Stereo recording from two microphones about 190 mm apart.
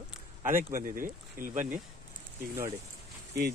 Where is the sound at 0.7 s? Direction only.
45° right (ahead or behind).